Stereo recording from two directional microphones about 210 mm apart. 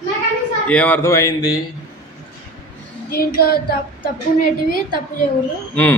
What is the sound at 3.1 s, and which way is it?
Child singing, 45° left (ahead or behind).